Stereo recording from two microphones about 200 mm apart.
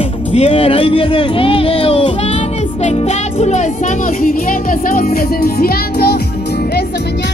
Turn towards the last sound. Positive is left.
turn(degrees=50)  # may be behind; listen again after turning